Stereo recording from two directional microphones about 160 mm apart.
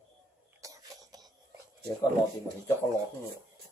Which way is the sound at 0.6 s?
20° right (ahead or behind).